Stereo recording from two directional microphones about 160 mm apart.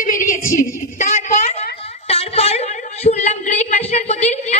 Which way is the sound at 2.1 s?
40° left (ahead or behind).